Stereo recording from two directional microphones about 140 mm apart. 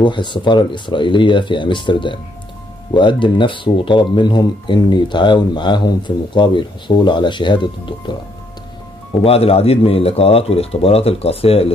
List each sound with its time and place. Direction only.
0.0 s speech: 35° left (ahead or behind)
9.2 s speech: 45° left (ahead or behind)